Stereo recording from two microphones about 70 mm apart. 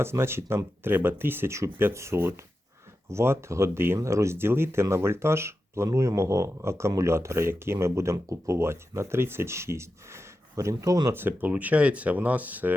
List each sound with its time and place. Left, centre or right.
0.0 s speech: right
11.1 s speech: right